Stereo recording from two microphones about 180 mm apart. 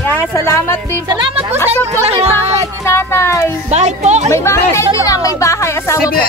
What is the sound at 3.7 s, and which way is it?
Speech, 40° right (ahead or behind).